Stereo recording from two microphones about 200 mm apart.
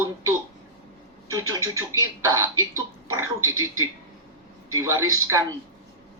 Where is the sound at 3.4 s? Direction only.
90° right.